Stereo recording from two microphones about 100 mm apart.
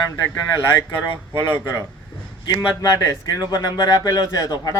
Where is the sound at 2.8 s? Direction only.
40° left (ahead or behind).